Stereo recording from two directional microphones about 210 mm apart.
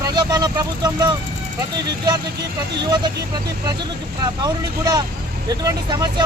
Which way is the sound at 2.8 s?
20° right (ahead or behind).